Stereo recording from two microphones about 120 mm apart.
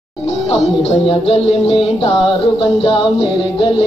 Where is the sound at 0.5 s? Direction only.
55° left (ahead or behind).